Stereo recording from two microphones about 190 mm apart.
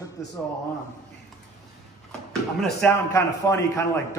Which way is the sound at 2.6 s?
10° left (ahead or behind).